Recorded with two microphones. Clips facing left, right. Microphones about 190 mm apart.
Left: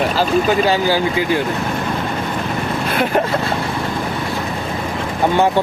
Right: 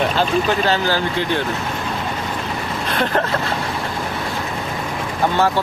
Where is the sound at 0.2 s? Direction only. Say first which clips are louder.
Left 3 dB; 10° left (ahead or behind).